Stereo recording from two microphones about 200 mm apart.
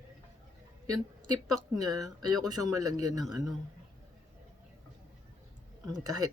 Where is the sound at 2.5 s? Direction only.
20° right (ahead or behind).